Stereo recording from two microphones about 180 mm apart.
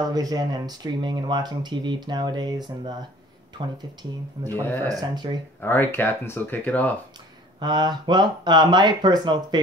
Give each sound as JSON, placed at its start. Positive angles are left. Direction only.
{"t": 0.1, "sound": "speech", "side_deg": -20}
{"t": 5.6, "sound": "speech", "side_deg": 10}
{"t": 7.6, "sound": "speech", "side_deg": -25}